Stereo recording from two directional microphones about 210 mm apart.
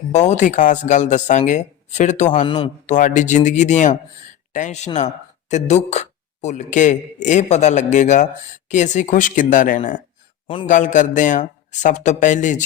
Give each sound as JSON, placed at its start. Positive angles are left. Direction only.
{"t": 0.1, "sound": "a man's voice", "side_deg": 35}
{"t": 10.4, "sound": "a man's voice", "side_deg": 25}
{"t": 10.7, "sound": "speech", "side_deg": 35}